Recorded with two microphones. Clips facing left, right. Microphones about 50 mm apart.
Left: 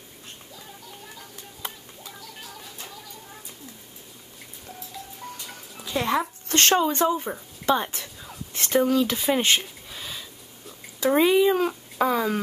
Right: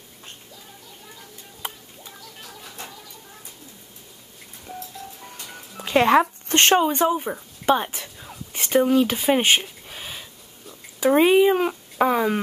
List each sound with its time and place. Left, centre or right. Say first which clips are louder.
5.2 s music: left 1 dB; centre
5.8 s music: right 8 dB; right
6.5 s speech: right 3 dB; right
9.3 s a sound: right 4 dB; centre
11.0 s speech: right 3 dB; right